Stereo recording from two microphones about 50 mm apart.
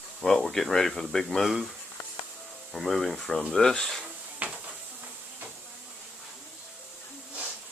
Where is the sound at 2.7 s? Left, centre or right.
Centre.